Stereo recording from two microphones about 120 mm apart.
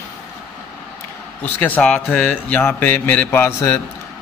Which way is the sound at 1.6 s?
10° left (ahead or behind).